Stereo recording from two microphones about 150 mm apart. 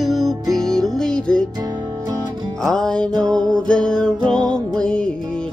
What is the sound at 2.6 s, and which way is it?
Music, 5° left (ahead or behind).